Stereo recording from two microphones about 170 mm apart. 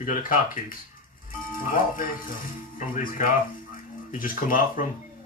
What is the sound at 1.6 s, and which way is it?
A man's voice, 55° left (ahead or behind).